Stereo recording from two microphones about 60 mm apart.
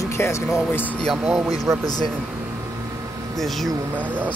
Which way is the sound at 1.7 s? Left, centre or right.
Right.